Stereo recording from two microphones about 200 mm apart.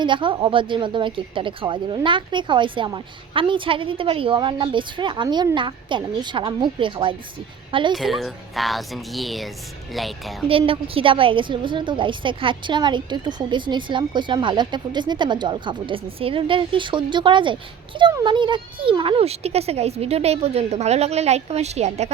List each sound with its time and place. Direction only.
0.0 s a woman's voice: 25° right (ahead or behind)
7.9 s speech: centre (ahead or behind)
10.5 s a woman's voice: 25° right (ahead or behind)